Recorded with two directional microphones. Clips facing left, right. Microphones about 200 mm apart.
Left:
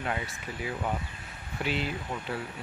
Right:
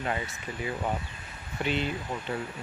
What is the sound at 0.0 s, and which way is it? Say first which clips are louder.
Speech: right 1 dB; centre (ahead or behind).